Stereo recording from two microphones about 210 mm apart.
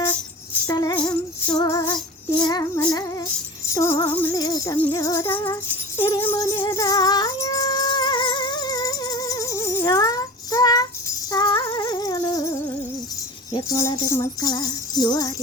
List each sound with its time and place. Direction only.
0.7 s music: 20° left (ahead or behind)